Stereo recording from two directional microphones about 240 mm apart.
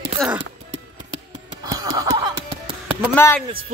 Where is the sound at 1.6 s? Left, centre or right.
Centre.